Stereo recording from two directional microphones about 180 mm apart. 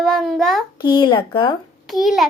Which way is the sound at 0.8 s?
25° left (ahead or behind).